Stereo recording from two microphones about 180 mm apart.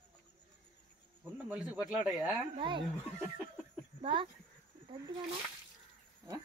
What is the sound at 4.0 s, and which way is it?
Speech, 30° right (ahead or behind).